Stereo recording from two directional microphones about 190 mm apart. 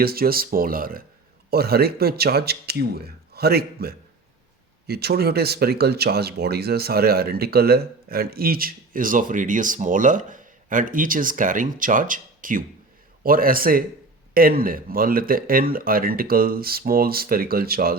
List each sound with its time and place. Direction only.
0.0 s speech: 50° right (ahead or behind)